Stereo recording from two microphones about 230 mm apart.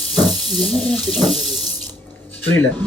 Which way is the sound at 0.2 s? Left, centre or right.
Centre.